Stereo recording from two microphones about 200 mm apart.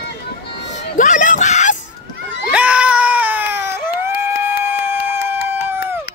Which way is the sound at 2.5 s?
5° right (ahead or behind).